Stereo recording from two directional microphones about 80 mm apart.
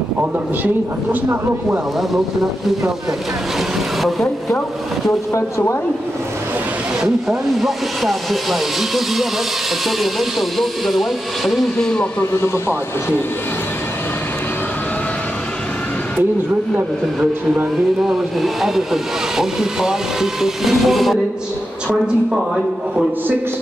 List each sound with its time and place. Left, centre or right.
4.0 s speech: centre
5.3 s speech: left
7.0 s speech: centre
12.2 s speech: left
16.7 s a man's voice: right
18.0 s speech: centre